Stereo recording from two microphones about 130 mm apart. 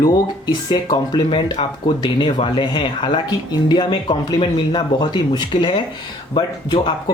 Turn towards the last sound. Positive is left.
turn(degrees=35)  # may be behind; listen again after turning